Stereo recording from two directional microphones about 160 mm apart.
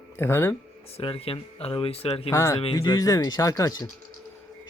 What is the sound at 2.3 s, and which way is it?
Speech, 20° left (ahead or behind).